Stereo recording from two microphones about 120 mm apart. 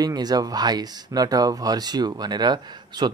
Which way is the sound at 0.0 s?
35° right (ahead or behind).